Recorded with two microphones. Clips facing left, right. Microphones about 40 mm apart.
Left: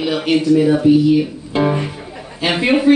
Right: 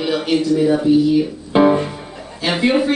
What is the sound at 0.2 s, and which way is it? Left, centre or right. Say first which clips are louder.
Speech: left 4 dB; centre.